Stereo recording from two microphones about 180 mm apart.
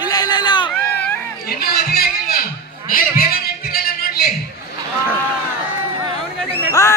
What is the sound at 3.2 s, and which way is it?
Music, 55° left (ahead or behind).